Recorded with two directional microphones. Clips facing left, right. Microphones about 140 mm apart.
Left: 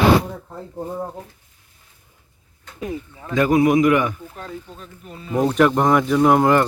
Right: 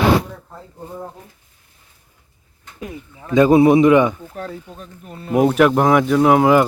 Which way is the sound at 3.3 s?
25° right (ahead or behind).